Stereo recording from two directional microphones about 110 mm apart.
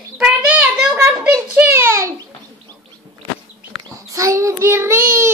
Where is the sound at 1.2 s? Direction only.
10° right (ahead or behind).